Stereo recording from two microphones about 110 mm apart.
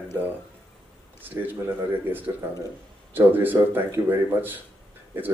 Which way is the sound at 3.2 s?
15° right (ahead or behind).